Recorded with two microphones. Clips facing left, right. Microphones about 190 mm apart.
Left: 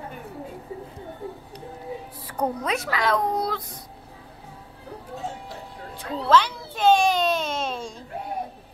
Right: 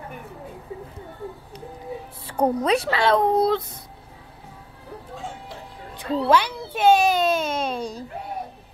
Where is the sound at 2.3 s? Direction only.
30° right (ahead or behind).